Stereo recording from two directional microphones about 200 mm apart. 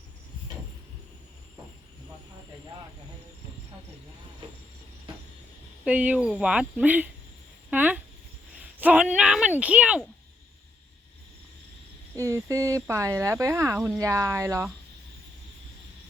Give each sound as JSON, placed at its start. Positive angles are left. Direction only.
{"t": 5.8, "sound": "speech", "side_deg": -5}
{"t": 12.1, "sound": "speech", "side_deg": -15}